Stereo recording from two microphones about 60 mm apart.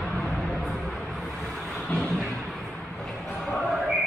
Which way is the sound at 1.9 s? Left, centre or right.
Left.